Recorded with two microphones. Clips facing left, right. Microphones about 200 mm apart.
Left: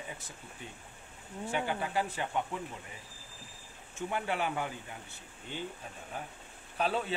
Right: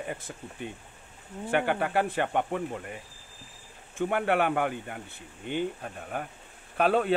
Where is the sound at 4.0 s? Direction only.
60° right (ahead or behind).